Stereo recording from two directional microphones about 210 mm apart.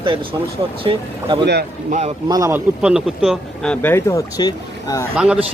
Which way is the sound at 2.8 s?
Centre (ahead or behind).